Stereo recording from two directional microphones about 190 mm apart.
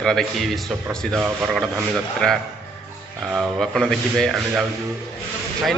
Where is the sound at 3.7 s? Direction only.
Centre (ahead or behind).